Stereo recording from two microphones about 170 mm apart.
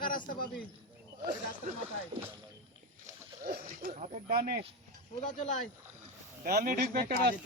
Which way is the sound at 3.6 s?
45° right (ahead or behind).